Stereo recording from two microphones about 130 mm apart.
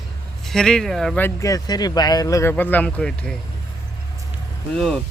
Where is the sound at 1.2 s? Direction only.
25° left (ahead or behind); by 3.3 s 10° left (ahead or behind).